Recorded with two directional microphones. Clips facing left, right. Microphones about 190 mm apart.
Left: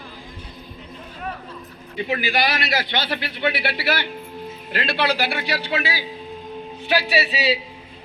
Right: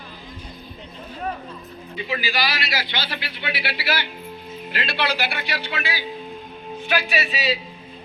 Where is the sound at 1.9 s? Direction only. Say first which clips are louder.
Left 4 dB; 50° left (ahead or behind).